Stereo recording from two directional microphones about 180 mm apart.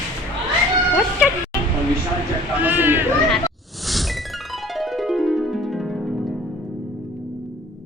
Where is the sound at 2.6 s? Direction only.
10° right (ahead or behind).